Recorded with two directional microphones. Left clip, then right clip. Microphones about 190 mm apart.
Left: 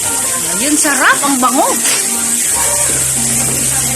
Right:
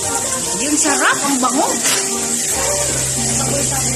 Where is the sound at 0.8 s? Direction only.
45° left (ahead or behind).